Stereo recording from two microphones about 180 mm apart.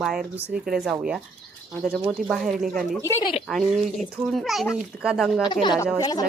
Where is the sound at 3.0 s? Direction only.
20° left (ahead or behind).